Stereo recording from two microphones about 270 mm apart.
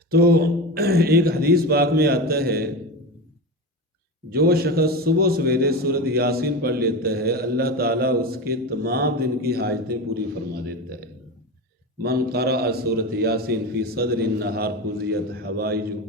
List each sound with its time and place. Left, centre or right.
0.1 s a man's voice: right
4.3 s a man's voice: right